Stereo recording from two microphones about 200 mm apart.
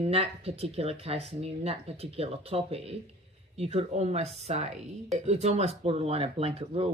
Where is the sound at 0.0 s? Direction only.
30° right (ahead or behind).